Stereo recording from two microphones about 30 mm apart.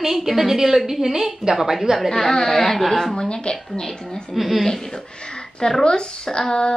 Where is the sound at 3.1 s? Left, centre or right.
Left.